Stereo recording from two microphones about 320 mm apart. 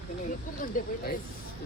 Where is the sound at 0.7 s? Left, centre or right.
Left.